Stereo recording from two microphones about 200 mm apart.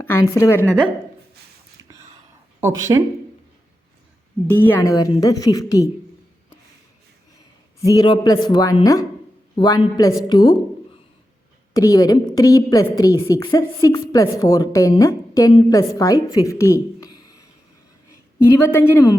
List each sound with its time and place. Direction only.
0.0 s a woman's voice: 10° left (ahead or behind)
2.6 s speech: 15° right (ahead or behind)
4.4 s a woman's voice: 10° left (ahead or behind)
7.8 s speech: 20° left (ahead or behind)
11.7 s a woman's voice: 15° left (ahead or behind)